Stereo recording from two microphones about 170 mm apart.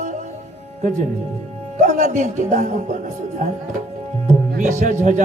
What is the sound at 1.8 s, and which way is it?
A man's voice, 45° right (ahead or behind).